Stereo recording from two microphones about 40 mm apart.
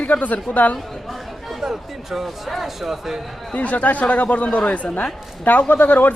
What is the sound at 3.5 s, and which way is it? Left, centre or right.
Speech, left.